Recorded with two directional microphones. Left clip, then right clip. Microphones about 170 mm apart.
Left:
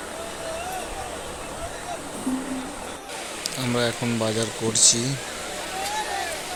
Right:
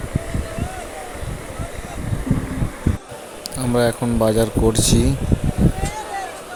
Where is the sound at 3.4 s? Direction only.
40° right (ahead or behind).